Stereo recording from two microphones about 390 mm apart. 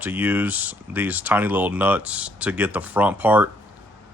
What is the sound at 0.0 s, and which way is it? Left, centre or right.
Speech, centre.